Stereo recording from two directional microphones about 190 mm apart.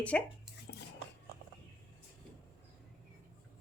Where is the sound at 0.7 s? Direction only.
60° left (ahead or behind).